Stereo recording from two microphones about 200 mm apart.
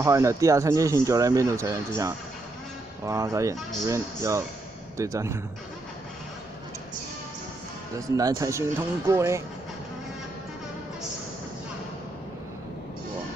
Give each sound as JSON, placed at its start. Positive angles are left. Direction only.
{"t": 0.0, "sound": "a man's voice", "side_deg": -15}
{"t": 3.1, "sound": "a man's voice", "side_deg": -15}
{"t": 8.2, "sound": "a man's voice", "side_deg": -15}